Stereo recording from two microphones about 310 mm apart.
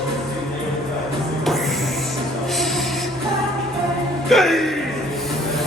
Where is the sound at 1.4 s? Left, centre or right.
Centre.